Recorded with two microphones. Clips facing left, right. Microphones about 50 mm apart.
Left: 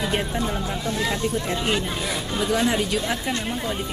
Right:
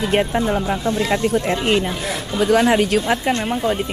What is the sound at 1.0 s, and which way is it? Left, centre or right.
Speech, right.